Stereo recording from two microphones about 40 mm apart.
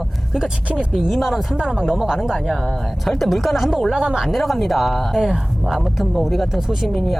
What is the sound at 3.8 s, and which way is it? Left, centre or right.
Speech, centre.